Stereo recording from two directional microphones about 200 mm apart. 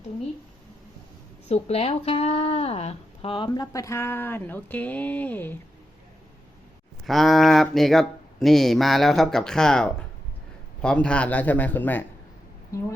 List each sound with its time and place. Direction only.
1.5 s speech: 30° left (ahead or behind); by 5.5 s 10° left (ahead or behind)
7.0 s a man's voice: centre (ahead or behind)